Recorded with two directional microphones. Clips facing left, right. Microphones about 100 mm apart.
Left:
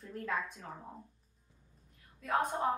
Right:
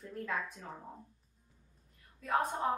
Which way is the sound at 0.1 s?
Centre (ahead or behind).